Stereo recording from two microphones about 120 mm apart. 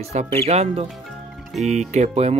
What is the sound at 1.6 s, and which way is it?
Speech, 75° right (ahead or behind).